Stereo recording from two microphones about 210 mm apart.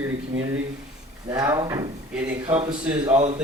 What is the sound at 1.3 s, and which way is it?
Speech, 15° right (ahead or behind).